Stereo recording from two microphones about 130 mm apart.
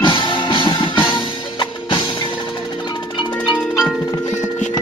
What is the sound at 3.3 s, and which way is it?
Tubular bells, 5° left (ahead or behind).